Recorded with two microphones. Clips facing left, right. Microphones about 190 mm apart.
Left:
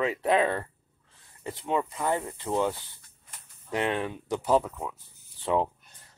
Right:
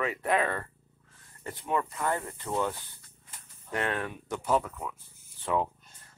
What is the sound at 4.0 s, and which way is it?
Speech, 25° left (ahead or behind).